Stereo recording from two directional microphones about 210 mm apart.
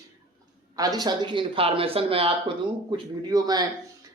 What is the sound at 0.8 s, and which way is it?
A man's voice, 20° right (ahead or behind).